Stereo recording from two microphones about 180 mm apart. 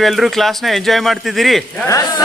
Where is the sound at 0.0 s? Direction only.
Centre (ahead or behind).